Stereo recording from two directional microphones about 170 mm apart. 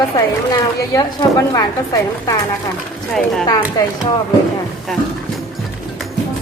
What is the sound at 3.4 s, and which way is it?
Speech, 20° left (ahead or behind).